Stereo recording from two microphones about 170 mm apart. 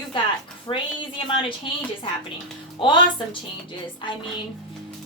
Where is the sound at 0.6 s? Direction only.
30° left (ahead or behind).